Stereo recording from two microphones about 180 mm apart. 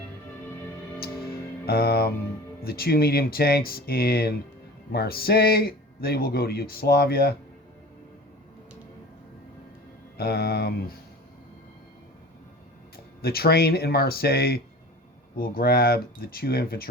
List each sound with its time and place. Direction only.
1.6 s speech: 60° left (ahead or behind)
10.2 s speech: 60° left (ahead or behind)
13.2 s speech: 60° left (ahead or behind)